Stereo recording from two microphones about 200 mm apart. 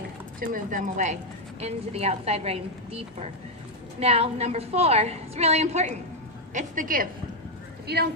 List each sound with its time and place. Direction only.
0.3 s a woman's voice: 40° right (ahead or behind)